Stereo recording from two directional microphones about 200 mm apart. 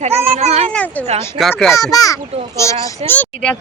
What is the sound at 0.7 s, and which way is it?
Speech, 10° left (ahead or behind).